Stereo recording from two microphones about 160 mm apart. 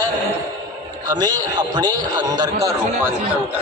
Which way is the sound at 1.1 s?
25° right (ahead or behind).